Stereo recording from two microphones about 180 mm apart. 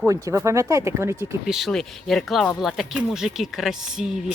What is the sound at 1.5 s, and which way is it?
Speech, centre (ahead or behind).